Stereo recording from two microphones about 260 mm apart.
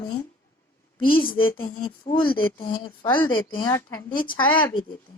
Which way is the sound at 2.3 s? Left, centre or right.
Centre.